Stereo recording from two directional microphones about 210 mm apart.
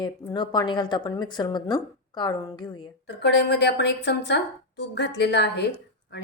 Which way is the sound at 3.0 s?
55° left (ahead or behind).